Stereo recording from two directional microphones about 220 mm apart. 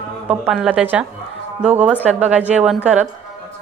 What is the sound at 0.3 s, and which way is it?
A woman's voice, 5° right (ahead or behind).